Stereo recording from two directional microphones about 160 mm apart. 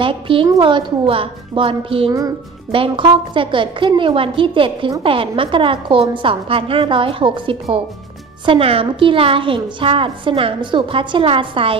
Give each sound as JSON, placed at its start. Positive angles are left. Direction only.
{"t": 0.0, "sound": "a woman's voice", "side_deg": -35}